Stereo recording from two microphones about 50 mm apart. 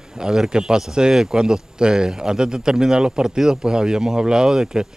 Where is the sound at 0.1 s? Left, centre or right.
Centre.